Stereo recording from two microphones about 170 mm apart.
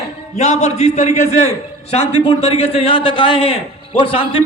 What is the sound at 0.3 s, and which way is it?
A man's voice, 45° left (ahead or behind).